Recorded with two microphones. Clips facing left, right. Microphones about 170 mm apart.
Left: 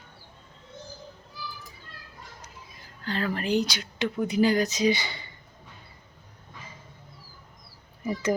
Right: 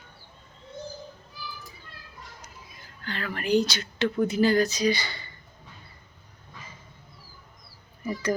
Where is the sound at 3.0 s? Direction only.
30° left (ahead or behind).